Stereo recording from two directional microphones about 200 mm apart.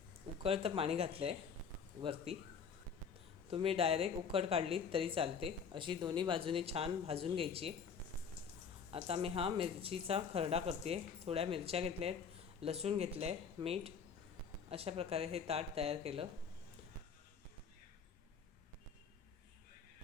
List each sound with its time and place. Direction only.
0.4 s speech: 30° right (ahead or behind)
3.5 s speech: 30° right (ahead or behind)
8.9 s speech: 30° right (ahead or behind)